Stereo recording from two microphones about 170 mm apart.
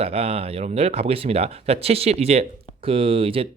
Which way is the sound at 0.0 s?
35° right (ahead or behind).